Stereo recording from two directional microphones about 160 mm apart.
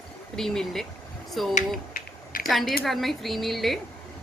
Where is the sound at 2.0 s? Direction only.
65° left (ahead or behind).